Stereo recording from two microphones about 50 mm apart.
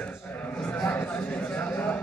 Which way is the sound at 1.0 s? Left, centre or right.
Left.